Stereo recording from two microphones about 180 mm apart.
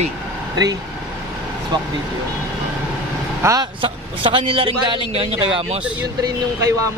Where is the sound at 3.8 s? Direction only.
30° right (ahead or behind).